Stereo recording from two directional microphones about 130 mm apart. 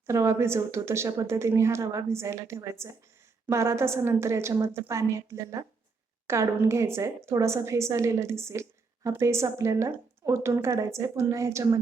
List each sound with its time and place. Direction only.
0.1 s a woman's voice: 20° right (ahead or behind)